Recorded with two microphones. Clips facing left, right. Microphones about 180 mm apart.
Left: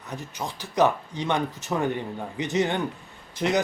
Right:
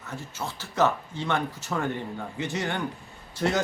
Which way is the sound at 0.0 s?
15° left (ahead or behind).